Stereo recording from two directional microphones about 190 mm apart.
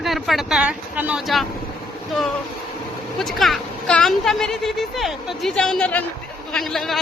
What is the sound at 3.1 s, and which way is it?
A woman's voice, centre (ahead or behind).